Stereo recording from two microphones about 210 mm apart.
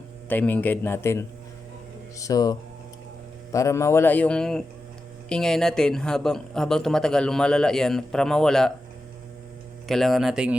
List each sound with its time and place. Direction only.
0.3 s speech: 10° left (ahead or behind)
9.8 s speech: centre (ahead or behind)